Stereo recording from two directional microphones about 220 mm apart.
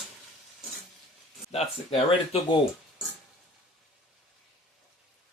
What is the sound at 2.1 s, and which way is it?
Speech, 25° left (ahead or behind).